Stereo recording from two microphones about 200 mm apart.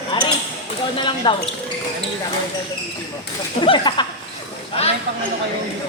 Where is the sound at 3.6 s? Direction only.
25° left (ahead or behind).